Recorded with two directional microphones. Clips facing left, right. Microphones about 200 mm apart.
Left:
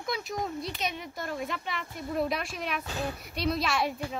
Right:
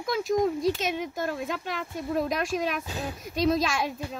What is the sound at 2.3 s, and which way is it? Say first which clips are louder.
Speech: right 5 dB; 45° right (ahead or behind).